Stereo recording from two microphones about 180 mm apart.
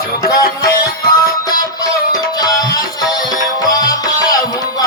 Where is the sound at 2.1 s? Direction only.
20° left (ahead or behind).